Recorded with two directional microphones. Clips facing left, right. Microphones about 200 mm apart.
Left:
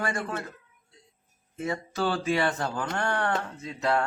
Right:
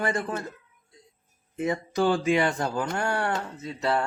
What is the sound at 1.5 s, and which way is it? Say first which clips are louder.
A man's voice: right 4 dB; 15° right (ahead or behind).